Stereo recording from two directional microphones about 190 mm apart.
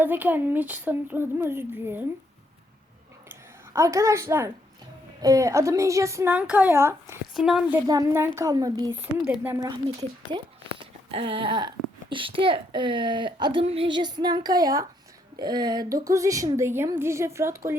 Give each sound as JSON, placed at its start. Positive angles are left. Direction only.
{"t": 0.0, "sound": "speech", "side_deg": -10}
{"t": 3.2, "sound": "a sound", "side_deg": -15}
{"t": 5.2, "sound": "speech", "side_deg": -15}
{"t": 7.3, "sound": "a woman's voice", "side_deg": 0}
{"t": 7.9, "sound": "speech", "side_deg": -15}
{"t": 9.1, "sound": "a woman's voice", "side_deg": -5}
{"t": 10.3, "sound": "speech", "side_deg": -25}